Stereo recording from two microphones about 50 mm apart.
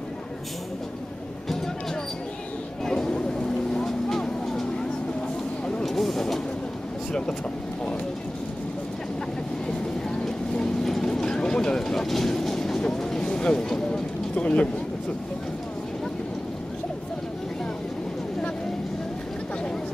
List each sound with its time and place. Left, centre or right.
2.8 s vehicle: centre
5.9 s vehicle: centre
7.1 s speech: centre
10.5 s vehicle: centre
14.3 s a sound: left